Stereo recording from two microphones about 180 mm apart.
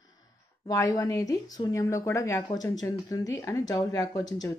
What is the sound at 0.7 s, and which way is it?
Speech, 20° left (ahead or behind).